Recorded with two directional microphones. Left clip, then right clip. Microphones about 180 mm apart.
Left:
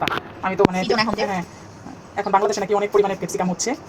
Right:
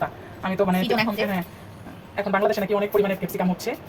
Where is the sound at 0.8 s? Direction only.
5° left (ahead or behind).